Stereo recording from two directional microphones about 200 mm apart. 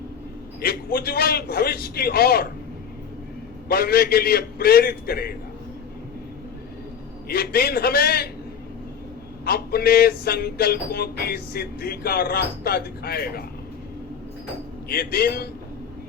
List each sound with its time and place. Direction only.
0.6 s speech: 50° left (ahead or behind)
3.7 s speech: 50° left (ahead or behind)
7.3 s speech: 50° left (ahead or behind)
9.4 s speech: 50° left (ahead or behind)
14.8 s speech: 50° left (ahead or behind)